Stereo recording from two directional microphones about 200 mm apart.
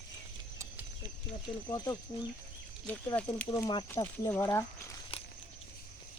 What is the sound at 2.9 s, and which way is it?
Speech, 10° left (ahead or behind).